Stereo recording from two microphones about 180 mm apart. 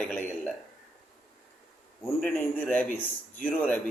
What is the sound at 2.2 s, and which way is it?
A man's voice, 10° left (ahead or behind).